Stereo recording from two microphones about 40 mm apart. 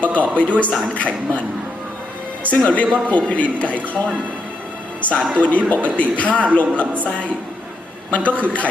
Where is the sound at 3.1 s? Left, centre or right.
Left.